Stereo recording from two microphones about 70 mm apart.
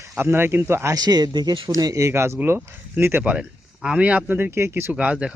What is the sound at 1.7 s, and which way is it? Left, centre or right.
Speech, right.